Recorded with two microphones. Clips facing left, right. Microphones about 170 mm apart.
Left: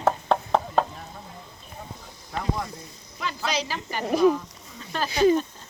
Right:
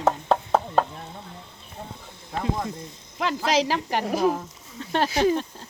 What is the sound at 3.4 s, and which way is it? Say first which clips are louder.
Speech: right 6 dB; 90° right.